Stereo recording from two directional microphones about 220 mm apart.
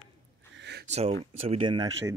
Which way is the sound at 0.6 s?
50° right (ahead or behind).